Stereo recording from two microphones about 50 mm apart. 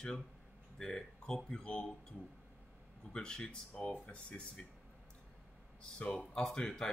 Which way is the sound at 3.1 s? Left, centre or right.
Centre.